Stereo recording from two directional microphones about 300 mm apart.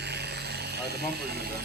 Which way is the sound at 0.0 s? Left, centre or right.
Right.